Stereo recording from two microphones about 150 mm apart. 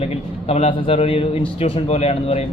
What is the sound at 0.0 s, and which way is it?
A man's voice, 40° left (ahead or behind).